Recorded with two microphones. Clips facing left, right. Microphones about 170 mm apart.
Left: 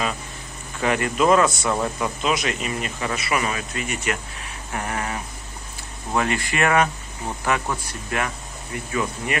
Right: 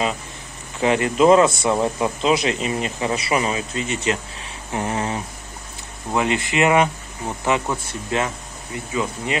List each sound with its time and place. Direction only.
0.7 s speech: 25° right (ahead or behind)